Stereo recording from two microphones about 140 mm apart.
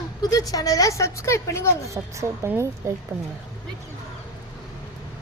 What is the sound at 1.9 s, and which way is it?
A woman's voice, 20° right (ahead or behind).